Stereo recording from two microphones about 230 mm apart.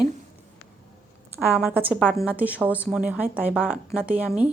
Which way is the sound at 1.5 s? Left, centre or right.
Centre.